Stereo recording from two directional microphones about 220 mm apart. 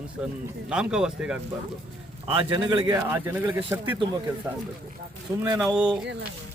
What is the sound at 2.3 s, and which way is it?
Speech, 25° right (ahead or behind).